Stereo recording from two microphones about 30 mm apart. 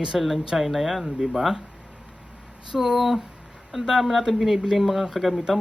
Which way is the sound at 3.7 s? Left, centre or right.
Centre.